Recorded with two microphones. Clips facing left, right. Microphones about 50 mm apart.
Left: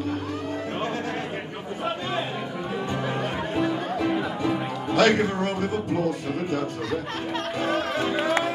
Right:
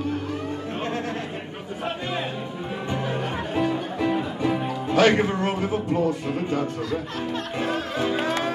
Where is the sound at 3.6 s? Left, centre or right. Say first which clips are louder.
Right 1 dB; right.